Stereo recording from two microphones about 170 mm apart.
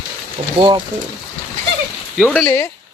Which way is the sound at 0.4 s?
35° right (ahead or behind).